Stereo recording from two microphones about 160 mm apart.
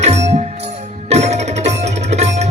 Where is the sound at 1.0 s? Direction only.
45° right (ahead or behind).